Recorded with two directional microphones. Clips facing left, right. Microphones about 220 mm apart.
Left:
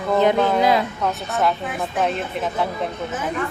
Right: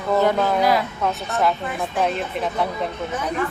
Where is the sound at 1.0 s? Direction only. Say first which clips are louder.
Even; centre (ahead or behind).